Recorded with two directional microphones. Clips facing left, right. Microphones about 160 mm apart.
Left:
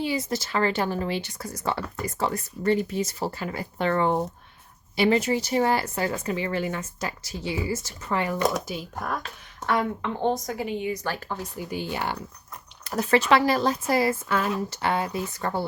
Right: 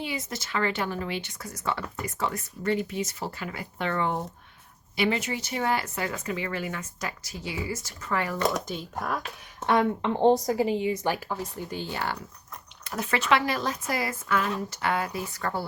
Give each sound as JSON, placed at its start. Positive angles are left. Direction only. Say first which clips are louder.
{"t": 0.0, "sound": "speech", "louder": "left 6 dB", "side_deg": 35}
{"t": 8.4, "sound": "speech", "louder": "left 2 dB", "side_deg": 5}
{"t": 9.2, "sound": "a woman's voice", "louder": "right 1 dB", "side_deg": -20}
{"t": 11.3, "sound": "speech", "louder": "left 1 dB", "side_deg": 0}
{"t": 12.8, "sound": "speech", "louder": "left 7 dB", "side_deg": 35}